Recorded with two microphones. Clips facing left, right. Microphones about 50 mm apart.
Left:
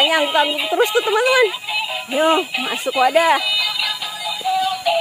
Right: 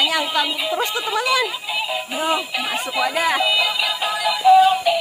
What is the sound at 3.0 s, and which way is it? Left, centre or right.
Speech, left.